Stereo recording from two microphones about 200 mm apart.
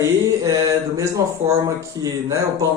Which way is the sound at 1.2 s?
15° right (ahead or behind).